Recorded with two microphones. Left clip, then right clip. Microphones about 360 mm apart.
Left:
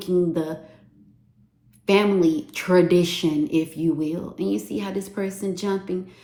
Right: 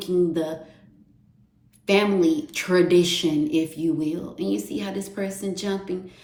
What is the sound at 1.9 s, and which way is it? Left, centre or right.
A woman's voice, centre.